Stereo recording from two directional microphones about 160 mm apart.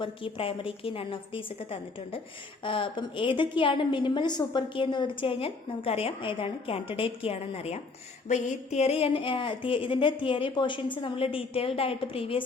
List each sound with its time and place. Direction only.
0.0 s a woman's voice: 35° left (ahead or behind)